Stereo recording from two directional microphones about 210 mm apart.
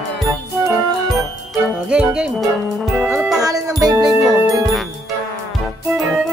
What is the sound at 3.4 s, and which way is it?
Music, 15° right (ahead or behind).